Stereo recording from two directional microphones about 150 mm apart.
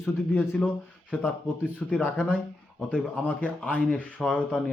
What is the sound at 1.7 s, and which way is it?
A man's voice, 10° left (ahead or behind).